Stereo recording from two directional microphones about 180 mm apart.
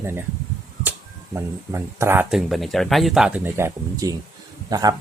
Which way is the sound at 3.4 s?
15° right (ahead or behind).